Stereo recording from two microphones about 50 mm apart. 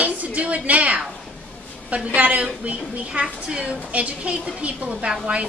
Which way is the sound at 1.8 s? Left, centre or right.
Right.